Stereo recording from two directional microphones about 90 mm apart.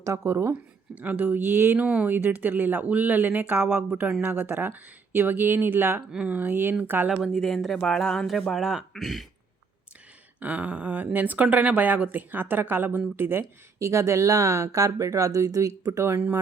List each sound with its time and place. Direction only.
0.0 s speech: 30° right (ahead or behind)
0.9 s speech: 20° right (ahead or behind)
1.8 s speech: 15° right (ahead or behind)
6.1 s speech: 10° right (ahead or behind)
7.2 s speech: centre (ahead or behind)
10.4 s speech: 15° right (ahead or behind)